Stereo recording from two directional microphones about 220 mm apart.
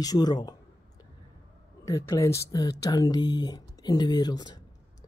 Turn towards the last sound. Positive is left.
turn(degrees=20)  # may be behind; listen again after turning